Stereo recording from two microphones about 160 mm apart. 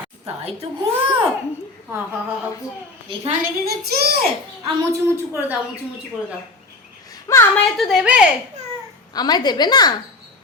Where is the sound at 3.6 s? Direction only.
75° right (ahead or behind).